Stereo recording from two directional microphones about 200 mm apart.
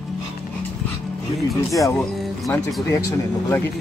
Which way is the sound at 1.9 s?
5° left (ahead or behind).